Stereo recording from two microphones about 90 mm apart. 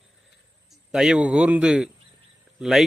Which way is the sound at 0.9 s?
5° right (ahead or behind).